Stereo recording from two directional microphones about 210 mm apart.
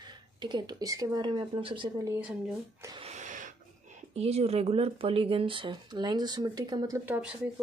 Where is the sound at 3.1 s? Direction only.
35° right (ahead or behind).